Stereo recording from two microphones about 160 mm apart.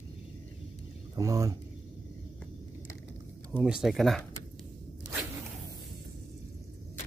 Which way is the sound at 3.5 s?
5° right (ahead or behind).